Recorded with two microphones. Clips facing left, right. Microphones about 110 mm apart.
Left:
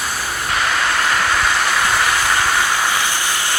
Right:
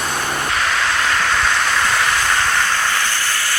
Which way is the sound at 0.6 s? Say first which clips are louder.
Left 2 dB; 5° left (ahead or behind).